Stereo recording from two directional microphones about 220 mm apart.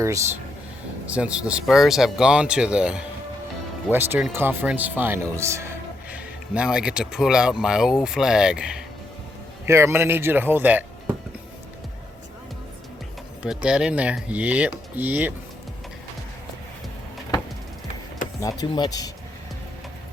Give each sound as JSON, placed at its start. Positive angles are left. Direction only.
{"t": 1.0, "sound": "speech", "side_deg": -5}
{"t": 13.4, "sound": "speech", "side_deg": -5}
{"t": 18.3, "sound": "speech", "side_deg": 15}